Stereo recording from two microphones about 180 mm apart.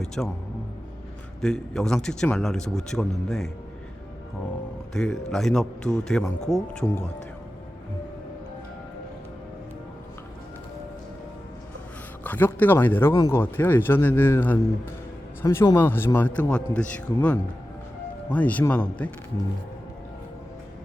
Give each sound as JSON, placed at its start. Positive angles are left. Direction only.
{"t": 0.0, "sound": "a man's voice", "side_deg": 0}
{"t": 1.4, "sound": "a man's voice", "side_deg": 0}
{"t": 4.9, "sound": "a man's voice", "side_deg": 0}
{"t": 12.2, "sound": "a man's voice", "side_deg": 10}